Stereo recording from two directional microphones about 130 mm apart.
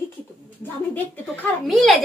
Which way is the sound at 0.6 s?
15° left (ahead or behind).